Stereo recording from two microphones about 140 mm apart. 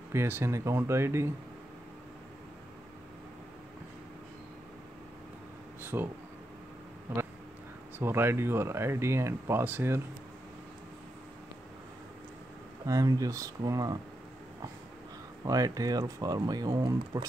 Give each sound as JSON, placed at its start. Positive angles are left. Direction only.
{"t": 0.1, "sound": "speech", "side_deg": -20}
{"t": 5.8, "sound": "a sound", "side_deg": -15}
{"t": 7.1, "sound": "speech", "side_deg": -15}
{"t": 12.8, "sound": "speech", "side_deg": -25}
{"t": 15.4, "sound": "speech", "side_deg": -25}